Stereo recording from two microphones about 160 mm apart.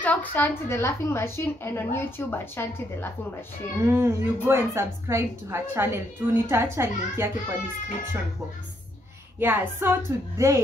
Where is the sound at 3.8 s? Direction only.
15° right (ahead or behind).